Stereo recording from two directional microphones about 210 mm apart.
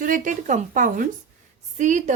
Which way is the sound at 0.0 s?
40° right (ahead or behind).